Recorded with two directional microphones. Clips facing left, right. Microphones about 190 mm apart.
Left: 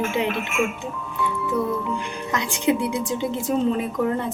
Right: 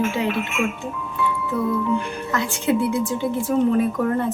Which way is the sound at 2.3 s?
15° left (ahead or behind).